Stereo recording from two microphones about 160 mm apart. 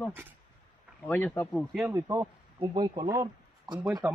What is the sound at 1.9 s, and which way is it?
Speech, 15° right (ahead or behind).